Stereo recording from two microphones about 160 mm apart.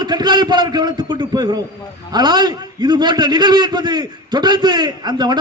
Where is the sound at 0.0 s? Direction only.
25° right (ahead or behind).